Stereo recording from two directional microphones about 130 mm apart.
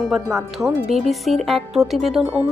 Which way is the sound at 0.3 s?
20° right (ahead or behind).